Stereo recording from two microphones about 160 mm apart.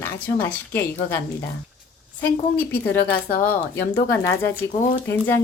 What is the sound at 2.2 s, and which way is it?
Speech, 10° left (ahead or behind).